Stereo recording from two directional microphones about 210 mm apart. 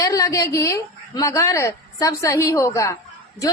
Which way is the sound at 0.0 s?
15° left (ahead or behind).